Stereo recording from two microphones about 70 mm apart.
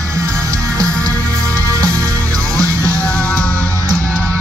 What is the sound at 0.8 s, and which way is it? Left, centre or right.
Music, centre.